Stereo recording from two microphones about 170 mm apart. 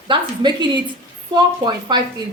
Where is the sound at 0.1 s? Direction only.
25° right (ahead or behind).